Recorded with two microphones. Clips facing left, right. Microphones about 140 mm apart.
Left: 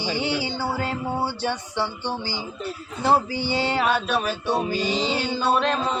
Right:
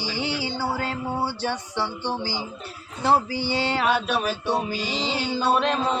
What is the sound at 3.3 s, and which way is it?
Music, 55° left (ahead or behind).